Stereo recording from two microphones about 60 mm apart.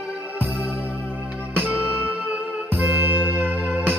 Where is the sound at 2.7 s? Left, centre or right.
Right.